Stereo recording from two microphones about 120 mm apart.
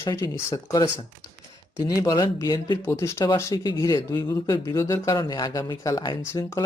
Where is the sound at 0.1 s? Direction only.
25° left (ahead or behind).